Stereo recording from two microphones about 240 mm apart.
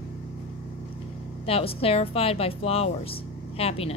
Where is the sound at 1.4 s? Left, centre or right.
Left.